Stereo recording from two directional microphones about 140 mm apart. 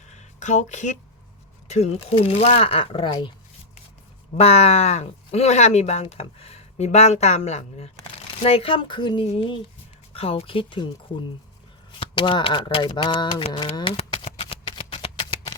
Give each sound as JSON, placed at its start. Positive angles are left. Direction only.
{"t": 0.1, "sound": "a sound", "side_deg": 55}
{"t": 1.7, "sound": "speech", "side_deg": 45}
{"t": 4.4, "sound": "speech", "side_deg": 50}
{"t": 8.4, "sound": "speech", "side_deg": 40}
{"t": 11.9, "sound": "speech", "side_deg": 35}
{"t": 13.9, "sound": "a sound", "side_deg": 40}
{"t": 14.3, "sound": "shuffling cards", "side_deg": 40}